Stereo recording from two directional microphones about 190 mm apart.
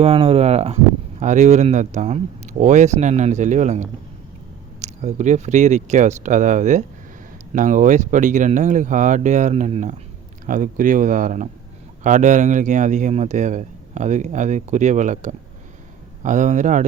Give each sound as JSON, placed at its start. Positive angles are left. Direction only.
{"t": 0.0, "sound": "a man's voice", "side_deg": -30}